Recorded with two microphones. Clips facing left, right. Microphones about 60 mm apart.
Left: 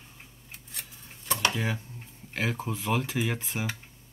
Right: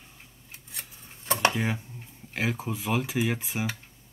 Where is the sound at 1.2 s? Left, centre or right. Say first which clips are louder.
Right 3 dB; right.